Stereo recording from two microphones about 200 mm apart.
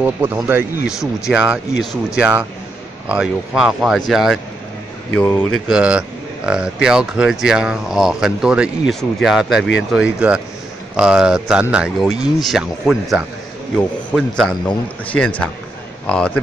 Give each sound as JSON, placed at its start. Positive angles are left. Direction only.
{"t": 0.0, "sound": "speech", "side_deg": -10}
{"t": 5.7, "sound": "speech", "side_deg": -5}
{"t": 9.6, "sound": "speech", "side_deg": 65}
{"t": 9.9, "sound": "speech", "side_deg": -5}